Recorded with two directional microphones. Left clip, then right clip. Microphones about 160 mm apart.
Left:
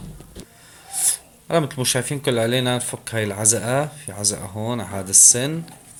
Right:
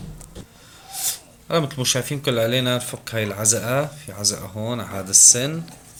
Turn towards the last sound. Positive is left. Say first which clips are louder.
# right 1 dB
turn(degrees=40)  # may be behind; listen again after turning